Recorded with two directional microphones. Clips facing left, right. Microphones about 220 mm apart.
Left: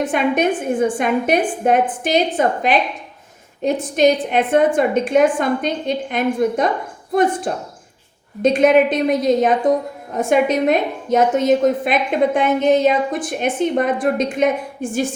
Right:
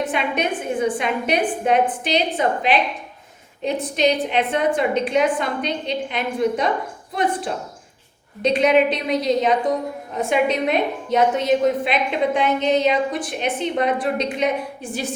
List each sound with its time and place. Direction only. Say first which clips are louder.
0.0 s a woman's voice: left 5 dB; 50° left (ahead or behind)